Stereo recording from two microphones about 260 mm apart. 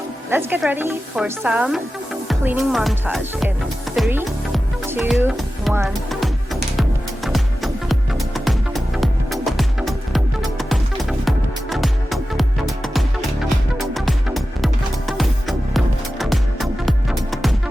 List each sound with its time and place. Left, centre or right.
0.3 s speech: centre
3.9 s music: centre